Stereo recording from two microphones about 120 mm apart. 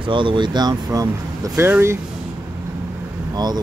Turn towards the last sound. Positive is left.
turn(degrees=-35)  # may be behind; listen again after turning